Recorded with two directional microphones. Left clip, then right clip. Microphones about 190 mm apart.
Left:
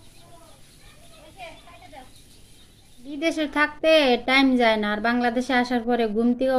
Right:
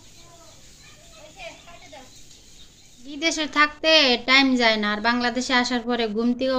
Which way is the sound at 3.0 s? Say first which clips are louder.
Even; 15° left (ahead or behind).